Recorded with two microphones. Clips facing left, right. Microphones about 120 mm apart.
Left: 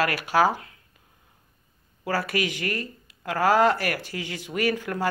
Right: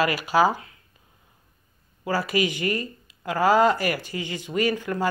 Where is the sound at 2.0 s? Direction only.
Centre (ahead or behind).